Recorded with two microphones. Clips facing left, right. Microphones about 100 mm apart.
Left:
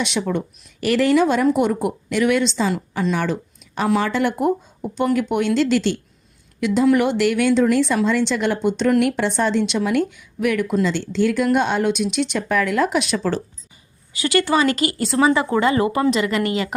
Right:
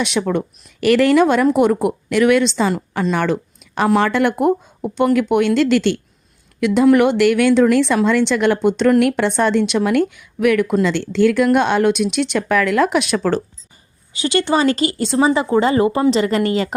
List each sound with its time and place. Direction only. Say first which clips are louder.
0.0 s speech: right 3 dB; 60° right (ahead or behind)
14.1 s speech: right 1 dB; 25° right (ahead or behind)